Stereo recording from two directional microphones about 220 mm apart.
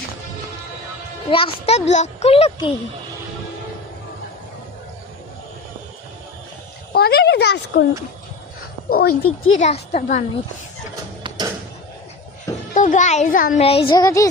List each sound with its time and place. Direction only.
1.3 s a child's voice: 25° left (ahead or behind)
6.9 s speech: 45° left (ahead or behind)
8.9 s speech: 45° left (ahead or behind)
9.2 s speech: 70° left (ahead or behind)
9.6 s speech: 30° left (ahead or behind)
12.7 s a child's voice: 35° left (ahead or behind); by 14.3 s 15° left (ahead or behind)